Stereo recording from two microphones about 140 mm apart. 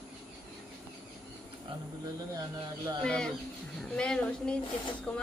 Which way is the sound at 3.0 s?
5° left (ahead or behind).